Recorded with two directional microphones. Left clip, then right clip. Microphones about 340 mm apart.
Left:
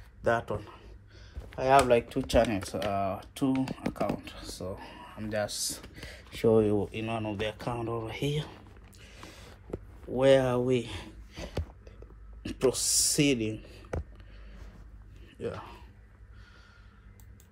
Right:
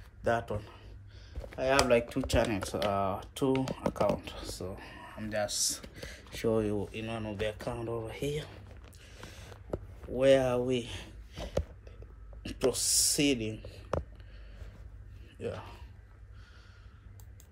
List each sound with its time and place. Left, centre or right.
0.2 s speech: centre
4.6 s speech: centre
9.0 s vehicle: centre
10.1 s speech: centre
15.4 s speech: centre